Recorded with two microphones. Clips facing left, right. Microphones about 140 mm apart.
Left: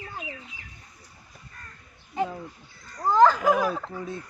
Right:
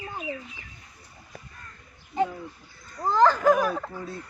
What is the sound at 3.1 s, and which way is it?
Speech, 10° left (ahead or behind).